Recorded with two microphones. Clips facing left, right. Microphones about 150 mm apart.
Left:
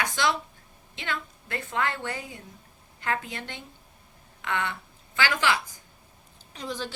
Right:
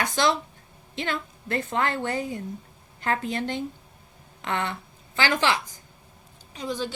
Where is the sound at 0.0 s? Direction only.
35° right (ahead or behind).